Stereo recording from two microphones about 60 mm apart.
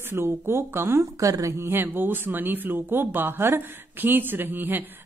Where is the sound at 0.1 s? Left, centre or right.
Right.